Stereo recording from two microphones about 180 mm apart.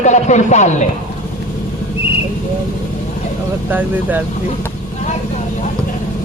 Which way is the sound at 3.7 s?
10° right (ahead or behind).